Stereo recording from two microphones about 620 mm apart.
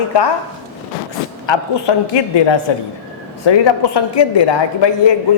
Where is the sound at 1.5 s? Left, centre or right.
Left.